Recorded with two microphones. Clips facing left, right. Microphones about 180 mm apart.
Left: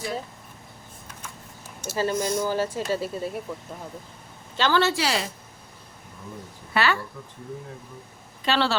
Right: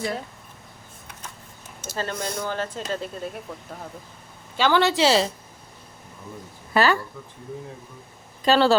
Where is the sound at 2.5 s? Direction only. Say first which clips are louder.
Left 3 dB; 10° left (ahead or behind).